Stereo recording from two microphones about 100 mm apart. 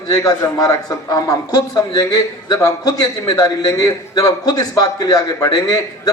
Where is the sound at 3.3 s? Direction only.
40° left (ahead or behind).